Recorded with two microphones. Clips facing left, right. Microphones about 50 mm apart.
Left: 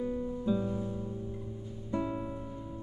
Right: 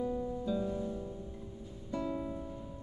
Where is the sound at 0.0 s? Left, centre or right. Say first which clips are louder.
Left 1 dB; left.